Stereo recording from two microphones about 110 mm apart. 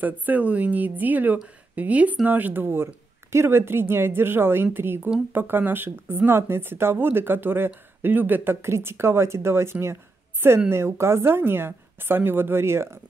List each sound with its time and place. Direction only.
0.0 s speech: 15° right (ahead or behind)